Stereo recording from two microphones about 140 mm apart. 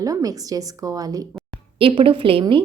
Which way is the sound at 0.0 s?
25° right (ahead or behind).